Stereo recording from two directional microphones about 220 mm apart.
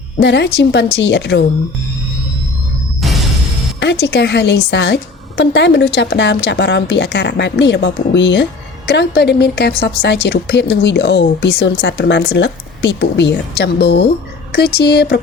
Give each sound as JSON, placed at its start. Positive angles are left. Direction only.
{"t": 0.2, "sound": "speech", "side_deg": 50}
{"t": 3.0, "sound": "music", "side_deg": 0}
{"t": 3.8, "sound": "speech", "side_deg": 50}